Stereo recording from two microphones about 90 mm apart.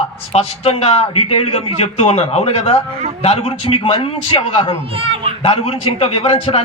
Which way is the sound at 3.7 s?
90° left.